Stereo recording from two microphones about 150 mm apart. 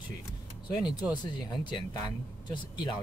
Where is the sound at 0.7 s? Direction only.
25° left (ahead or behind).